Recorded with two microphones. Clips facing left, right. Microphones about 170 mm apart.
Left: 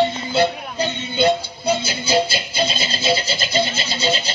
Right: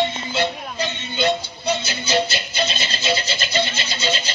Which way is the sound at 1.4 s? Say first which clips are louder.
Left 3 dB; 10° left (ahead or behind).